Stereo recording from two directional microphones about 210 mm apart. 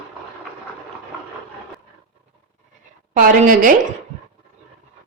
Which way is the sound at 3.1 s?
40° right (ahead or behind).